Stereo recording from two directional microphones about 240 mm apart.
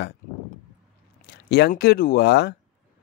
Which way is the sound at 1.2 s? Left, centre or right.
Left.